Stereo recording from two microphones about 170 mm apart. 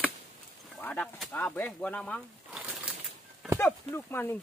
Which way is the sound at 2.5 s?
5° right (ahead or behind).